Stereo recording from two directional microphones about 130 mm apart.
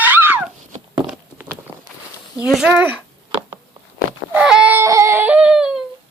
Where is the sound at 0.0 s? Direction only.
15° right (ahead or behind).